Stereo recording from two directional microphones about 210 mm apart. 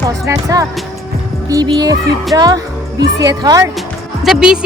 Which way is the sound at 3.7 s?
Centre (ahead or behind).